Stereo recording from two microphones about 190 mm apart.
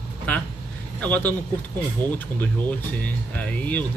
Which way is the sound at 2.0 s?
20° right (ahead or behind).